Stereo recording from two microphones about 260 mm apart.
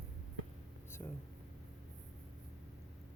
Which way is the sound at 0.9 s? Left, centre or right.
Centre.